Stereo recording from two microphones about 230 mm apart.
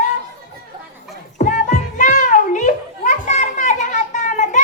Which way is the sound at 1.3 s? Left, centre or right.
Left.